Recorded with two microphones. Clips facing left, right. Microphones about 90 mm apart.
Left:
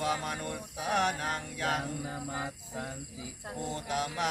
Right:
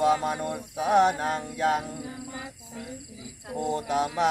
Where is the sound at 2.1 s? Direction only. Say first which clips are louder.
Left 1 dB; 45° left (ahead or behind).